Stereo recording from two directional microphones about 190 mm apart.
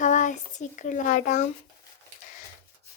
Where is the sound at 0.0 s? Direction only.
40° left (ahead or behind).